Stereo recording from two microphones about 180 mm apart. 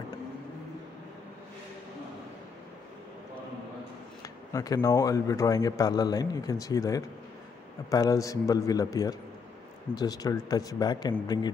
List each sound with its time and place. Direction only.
4.2 s speech: 20° left (ahead or behind)